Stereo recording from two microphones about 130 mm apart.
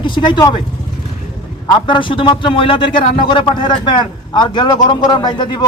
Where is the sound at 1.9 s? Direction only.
40° left (ahead or behind).